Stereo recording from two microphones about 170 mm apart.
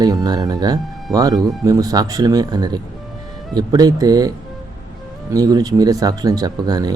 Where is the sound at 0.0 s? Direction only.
20° right (ahead or behind).